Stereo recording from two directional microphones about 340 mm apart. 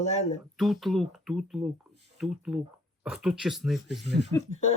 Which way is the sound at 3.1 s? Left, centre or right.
Centre.